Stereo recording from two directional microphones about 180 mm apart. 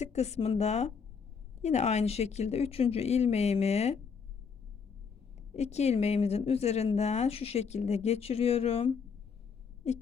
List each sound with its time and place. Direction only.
0.0 s speech: 35° left (ahead or behind)
5.5 s speech: 35° left (ahead or behind)